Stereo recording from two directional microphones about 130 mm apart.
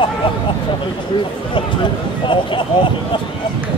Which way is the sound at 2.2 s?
40° left (ahead or behind).